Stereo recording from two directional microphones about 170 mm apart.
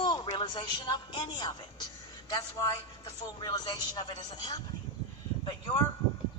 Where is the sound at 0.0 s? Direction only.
25° left (ahead or behind).